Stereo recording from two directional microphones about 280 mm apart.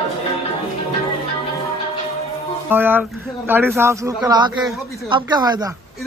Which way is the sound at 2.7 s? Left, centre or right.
Centre.